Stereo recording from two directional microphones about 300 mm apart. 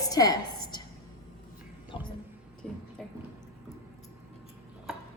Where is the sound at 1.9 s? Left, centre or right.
Centre.